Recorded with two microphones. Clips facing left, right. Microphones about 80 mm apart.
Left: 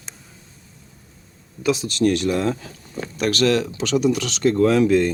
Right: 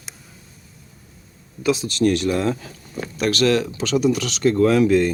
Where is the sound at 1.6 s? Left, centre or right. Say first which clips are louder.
Right 1 dB; left.